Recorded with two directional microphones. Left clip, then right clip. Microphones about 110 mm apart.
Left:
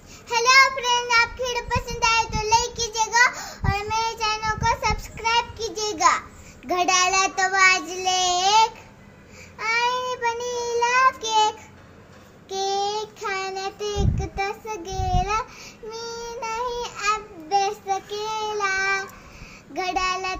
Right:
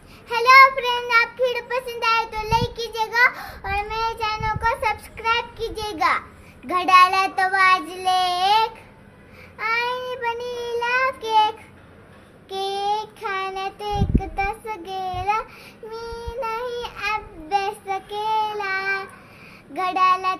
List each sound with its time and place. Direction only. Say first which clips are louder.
0.3 s child singing: right 4 dB; 40° right (ahead or behind)